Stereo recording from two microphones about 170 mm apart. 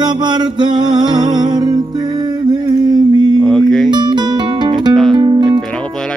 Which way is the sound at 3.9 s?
25° right (ahead or behind).